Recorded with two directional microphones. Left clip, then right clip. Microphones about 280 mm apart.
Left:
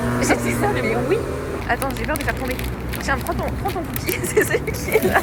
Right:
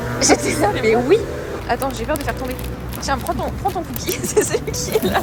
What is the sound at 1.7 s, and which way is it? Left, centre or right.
Speech, centre.